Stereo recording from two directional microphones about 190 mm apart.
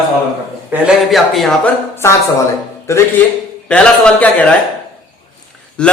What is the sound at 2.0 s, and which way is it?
A man's voice, 15° left (ahead or behind).